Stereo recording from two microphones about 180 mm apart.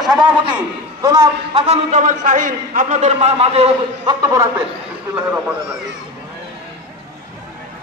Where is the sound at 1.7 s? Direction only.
45° right (ahead or behind).